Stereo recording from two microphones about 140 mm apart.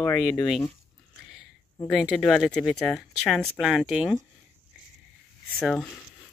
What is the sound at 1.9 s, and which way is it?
Speech, centre (ahead or behind).